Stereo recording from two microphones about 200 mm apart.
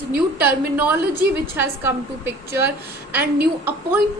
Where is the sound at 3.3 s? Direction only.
50° right (ahead or behind).